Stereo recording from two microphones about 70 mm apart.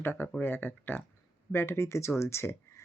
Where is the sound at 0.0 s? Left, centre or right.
Left.